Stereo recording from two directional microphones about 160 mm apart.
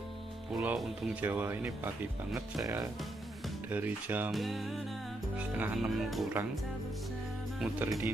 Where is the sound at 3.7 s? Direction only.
10° right (ahead or behind).